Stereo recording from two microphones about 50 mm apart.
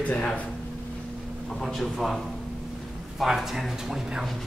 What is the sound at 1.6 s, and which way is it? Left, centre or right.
Speech, centre.